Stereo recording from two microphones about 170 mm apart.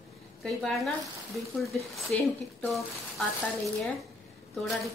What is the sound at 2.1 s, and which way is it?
A woman's voice, 5° left (ahead or behind).